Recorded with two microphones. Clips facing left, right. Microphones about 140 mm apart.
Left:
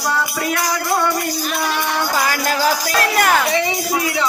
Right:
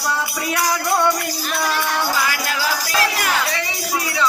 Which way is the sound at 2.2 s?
45° left (ahead or behind).